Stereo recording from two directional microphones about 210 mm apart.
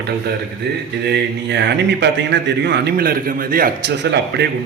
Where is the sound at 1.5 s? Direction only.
55° right (ahead or behind).